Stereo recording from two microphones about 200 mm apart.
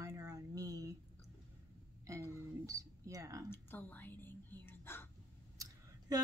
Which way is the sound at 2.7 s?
15° right (ahead or behind).